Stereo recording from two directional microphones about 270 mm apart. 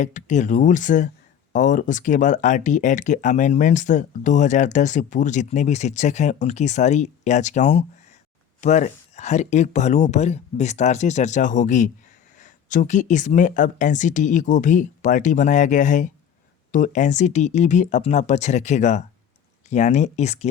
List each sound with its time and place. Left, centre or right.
0.0 s speech: left